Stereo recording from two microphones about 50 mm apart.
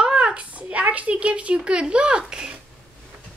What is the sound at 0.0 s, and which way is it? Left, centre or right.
Speech, centre.